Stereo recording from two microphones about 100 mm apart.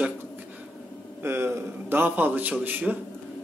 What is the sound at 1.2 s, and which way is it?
A man's voice, 25° right (ahead or behind).